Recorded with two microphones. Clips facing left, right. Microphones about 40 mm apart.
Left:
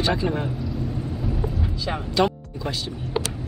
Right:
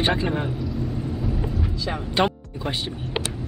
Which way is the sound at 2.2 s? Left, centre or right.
Right.